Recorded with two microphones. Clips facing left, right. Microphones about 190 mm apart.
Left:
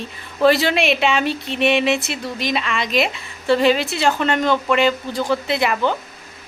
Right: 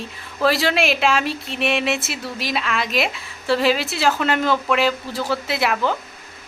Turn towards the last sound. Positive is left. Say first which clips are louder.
# left 2 dB
turn(degrees=0)  # may be behind; listen again after turning